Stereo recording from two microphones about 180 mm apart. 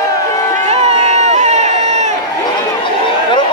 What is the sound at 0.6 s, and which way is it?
Run, 35° right (ahead or behind).